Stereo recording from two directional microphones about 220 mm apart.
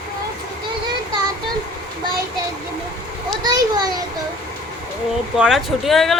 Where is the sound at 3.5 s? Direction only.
20° right (ahead or behind).